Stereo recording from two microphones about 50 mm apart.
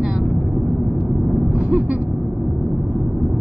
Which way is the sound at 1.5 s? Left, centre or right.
Right.